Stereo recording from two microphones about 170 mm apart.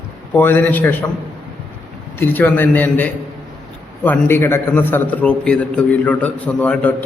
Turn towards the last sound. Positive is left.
turn(degrees=5)  # may be behind; listen again after turning